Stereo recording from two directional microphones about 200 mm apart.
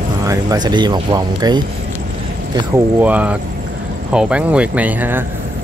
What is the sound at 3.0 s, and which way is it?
Speech, 5° right (ahead or behind).